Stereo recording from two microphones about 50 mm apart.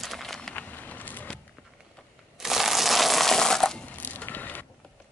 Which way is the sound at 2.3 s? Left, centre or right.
Centre.